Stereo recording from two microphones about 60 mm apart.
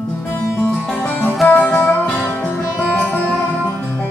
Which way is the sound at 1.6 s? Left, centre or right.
Centre.